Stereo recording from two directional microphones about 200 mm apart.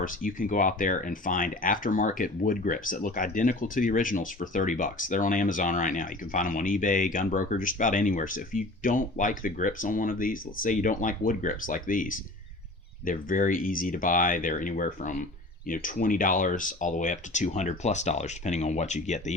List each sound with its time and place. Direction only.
0.0 s speech: 45° left (ahead or behind)